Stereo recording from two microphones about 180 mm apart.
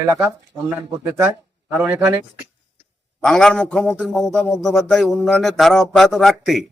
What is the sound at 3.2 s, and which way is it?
A man's voice, centre (ahead or behind).